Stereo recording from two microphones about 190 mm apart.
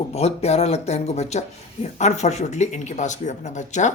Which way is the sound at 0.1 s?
35° left (ahead or behind).